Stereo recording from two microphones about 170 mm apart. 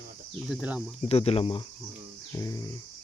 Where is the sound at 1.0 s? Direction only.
35° left (ahead or behind).